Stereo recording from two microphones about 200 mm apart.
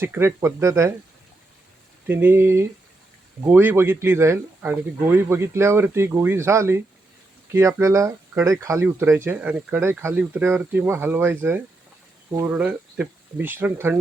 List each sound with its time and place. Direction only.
0.0 s speech: 10° right (ahead or behind)
2.0 s speech: 10° right (ahead or behind)